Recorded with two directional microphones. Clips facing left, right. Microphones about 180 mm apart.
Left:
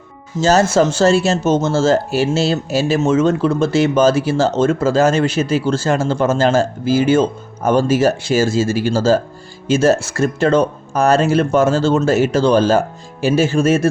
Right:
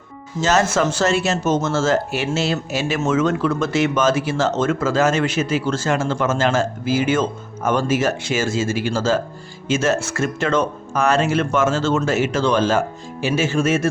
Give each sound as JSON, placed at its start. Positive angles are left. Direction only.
{"t": 0.4, "sound": "speech", "side_deg": 35}